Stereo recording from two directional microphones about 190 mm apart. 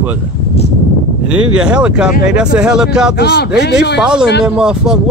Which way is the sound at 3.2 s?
60° left (ahead or behind).